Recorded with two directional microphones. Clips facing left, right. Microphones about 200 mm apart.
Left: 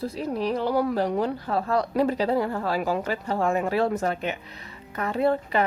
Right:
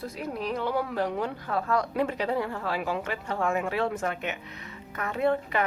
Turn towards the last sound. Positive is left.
turn(degrees=30)  # may be behind; listen again after turning